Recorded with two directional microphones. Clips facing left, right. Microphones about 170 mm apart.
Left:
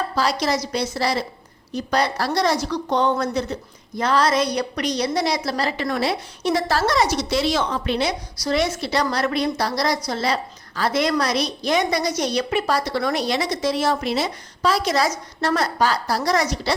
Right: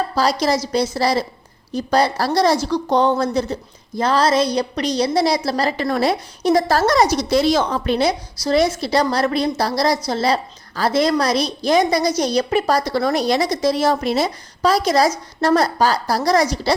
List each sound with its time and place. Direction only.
0.2 s a woman's voice: 35° right (ahead or behind)